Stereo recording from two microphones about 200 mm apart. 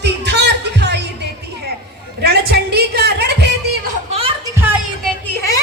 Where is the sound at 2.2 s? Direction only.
50° right (ahead or behind).